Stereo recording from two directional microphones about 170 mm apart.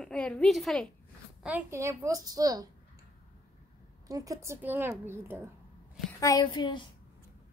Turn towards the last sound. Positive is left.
turn(degrees=25)  # may be behind; listen again after turning